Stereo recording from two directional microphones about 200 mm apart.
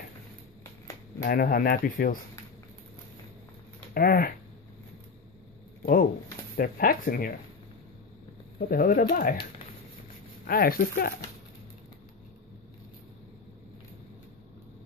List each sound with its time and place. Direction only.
1.2 s speech: 45° left (ahead or behind)
3.9 s speech: 45° left (ahead or behind)
5.8 s a sound: 45° left (ahead or behind)
6.5 s speech: 45° left (ahead or behind)
8.5 s speech: 45° left (ahead or behind)